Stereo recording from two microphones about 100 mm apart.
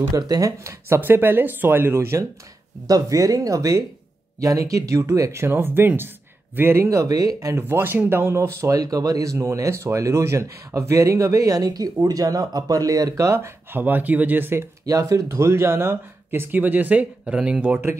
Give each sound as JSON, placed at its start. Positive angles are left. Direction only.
{"t": 0.1, "sound": "speech", "side_deg": -35}
{"t": 2.9, "sound": "speech", "side_deg": -35}
{"t": 7.6, "sound": "speech", "side_deg": -20}
{"t": 14.9, "sound": "speech", "side_deg": -35}